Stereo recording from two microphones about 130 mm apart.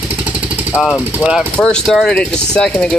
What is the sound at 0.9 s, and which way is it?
Speech, 10° right (ahead or behind).